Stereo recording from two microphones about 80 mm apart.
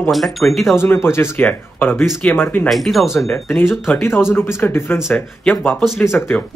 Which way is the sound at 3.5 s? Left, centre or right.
Left.